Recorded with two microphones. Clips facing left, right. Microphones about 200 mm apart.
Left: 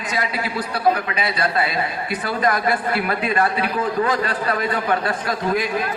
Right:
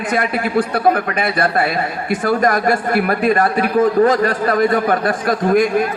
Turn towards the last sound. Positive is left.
turn(degrees=-50)  # may be behind; listen again after turning